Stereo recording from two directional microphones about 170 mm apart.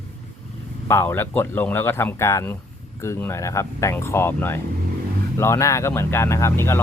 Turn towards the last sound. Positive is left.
turn(degrees=15)  # may be behind; listen again after turning